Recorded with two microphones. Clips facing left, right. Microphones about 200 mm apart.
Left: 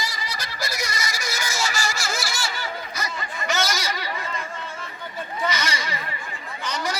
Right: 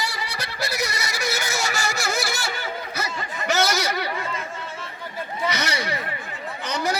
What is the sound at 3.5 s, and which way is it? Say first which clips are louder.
Chatter: right 4 dB; 65° right (ahead or behind).